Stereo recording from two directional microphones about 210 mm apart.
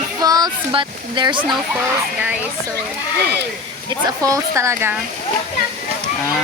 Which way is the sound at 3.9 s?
15° right (ahead or behind).